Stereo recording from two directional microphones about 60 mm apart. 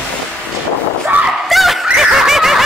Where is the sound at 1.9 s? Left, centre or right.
Centre.